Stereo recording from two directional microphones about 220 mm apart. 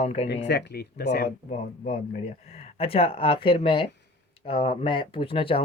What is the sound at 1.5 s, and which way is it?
Speech, 30° left (ahead or behind).